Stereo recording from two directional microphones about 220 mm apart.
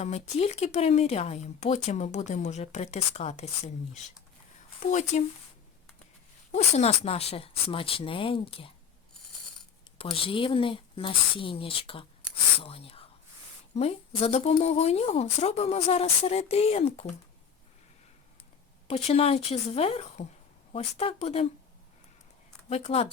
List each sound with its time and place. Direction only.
0.0 s speech: 30° left (ahead or behind)
4.9 s speech: 35° left (ahead or behind)
6.5 s speech: 30° left (ahead or behind)
10.0 s speech: 25° left (ahead or behind)
18.9 s speech: 25° left (ahead or behind)
22.7 s speech: 25° left (ahead or behind)